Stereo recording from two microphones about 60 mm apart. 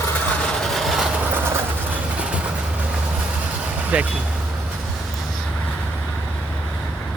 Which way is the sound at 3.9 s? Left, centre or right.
Right.